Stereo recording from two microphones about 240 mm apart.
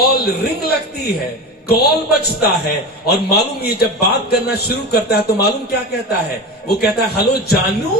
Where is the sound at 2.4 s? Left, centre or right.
Left.